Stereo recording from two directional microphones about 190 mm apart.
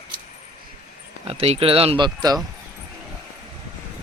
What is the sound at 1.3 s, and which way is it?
Speech, 30° right (ahead or behind).